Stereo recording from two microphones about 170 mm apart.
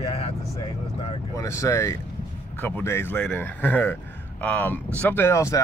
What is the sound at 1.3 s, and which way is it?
Speech, 20° left (ahead or behind).